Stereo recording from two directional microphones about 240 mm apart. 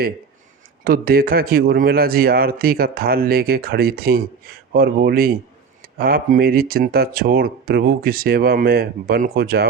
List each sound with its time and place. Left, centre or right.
0.9 s speech: right